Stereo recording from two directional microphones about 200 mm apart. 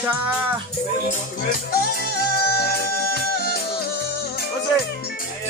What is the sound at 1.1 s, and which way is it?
Music, 45° left (ahead or behind).